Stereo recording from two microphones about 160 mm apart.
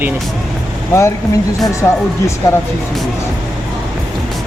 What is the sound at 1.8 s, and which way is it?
Speech, 15° left (ahead or behind).